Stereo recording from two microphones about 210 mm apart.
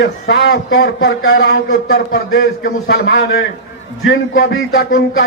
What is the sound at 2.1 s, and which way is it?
Speech, 45° left (ahead or behind).